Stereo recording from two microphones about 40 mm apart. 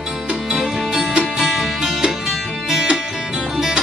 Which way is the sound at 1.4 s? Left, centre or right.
Centre.